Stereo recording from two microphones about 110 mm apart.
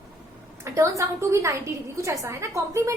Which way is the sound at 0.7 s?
25° right (ahead or behind).